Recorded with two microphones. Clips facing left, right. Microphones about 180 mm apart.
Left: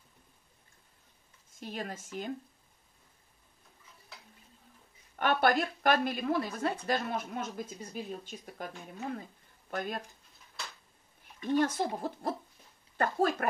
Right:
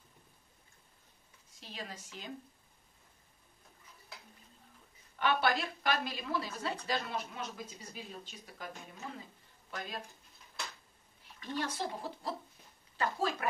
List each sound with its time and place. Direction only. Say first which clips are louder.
1.6 s a woman's voice: left 7 dB; 50° left (ahead or behind)
5.2 s a woman's voice: left 4 dB; 50° left (ahead or behind)
9.7 s speech: left 7 dB; 50° left (ahead or behind)
11.4 s a woman's voice: left 9 dB; 50° left (ahead or behind)